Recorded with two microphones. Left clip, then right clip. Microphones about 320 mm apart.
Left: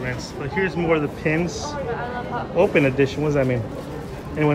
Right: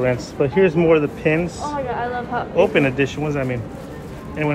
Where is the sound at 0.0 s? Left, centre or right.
Centre.